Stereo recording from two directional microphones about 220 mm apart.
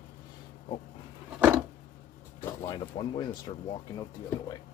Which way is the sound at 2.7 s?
20° left (ahead or behind).